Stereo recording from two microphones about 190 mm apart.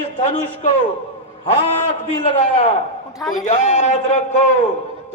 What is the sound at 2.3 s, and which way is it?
Speech, 35° left (ahead or behind).